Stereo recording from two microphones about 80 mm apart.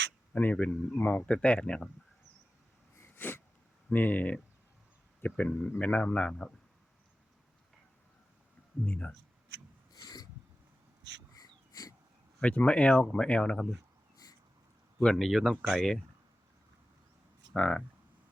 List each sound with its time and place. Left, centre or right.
0.5 s speech: centre
2.9 s sneeze: left
3.9 s speech: left
8.9 s speech: centre
9.9 s a sound: left
11.7 s wheeze: left
12.4 s speech: centre
14.9 s speech: centre
17.5 s speech: centre